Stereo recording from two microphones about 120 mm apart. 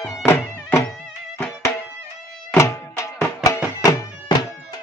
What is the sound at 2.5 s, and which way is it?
Music, 25° left (ahead or behind).